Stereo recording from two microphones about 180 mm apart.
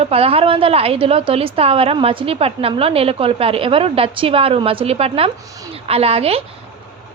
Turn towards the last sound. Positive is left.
turn(degrees=-35)  # may be behind; listen again after turning